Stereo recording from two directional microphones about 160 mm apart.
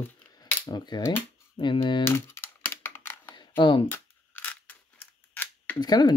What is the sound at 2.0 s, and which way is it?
Computer keyboard, 15° left (ahead or behind).